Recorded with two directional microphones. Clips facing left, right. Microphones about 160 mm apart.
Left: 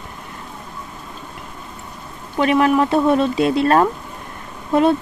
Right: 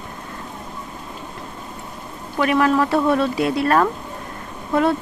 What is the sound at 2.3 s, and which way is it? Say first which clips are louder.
Speech: left 2 dB; 20° left (ahead or behind).